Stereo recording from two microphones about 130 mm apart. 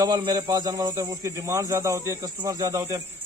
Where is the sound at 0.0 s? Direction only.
30° right (ahead or behind).